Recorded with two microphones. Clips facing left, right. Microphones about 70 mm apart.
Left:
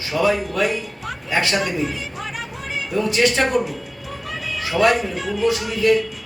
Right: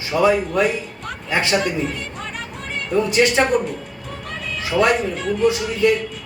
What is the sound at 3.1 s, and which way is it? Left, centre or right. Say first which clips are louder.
Speech: right 2 dB; right.